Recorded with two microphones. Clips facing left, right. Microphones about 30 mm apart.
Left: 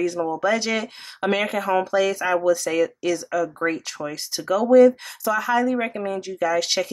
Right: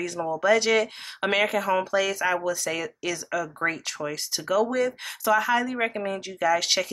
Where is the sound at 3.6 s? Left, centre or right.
Centre.